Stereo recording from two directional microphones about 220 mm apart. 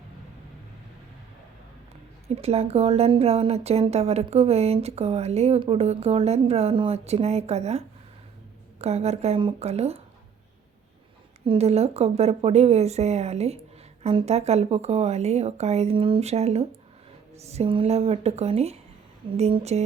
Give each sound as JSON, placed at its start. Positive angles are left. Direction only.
{"t": 2.2, "sound": "speech", "side_deg": -30}
{"t": 11.4, "sound": "speech", "side_deg": -30}